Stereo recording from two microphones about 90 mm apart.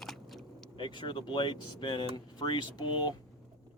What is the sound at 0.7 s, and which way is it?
Speech, 65° left (ahead or behind).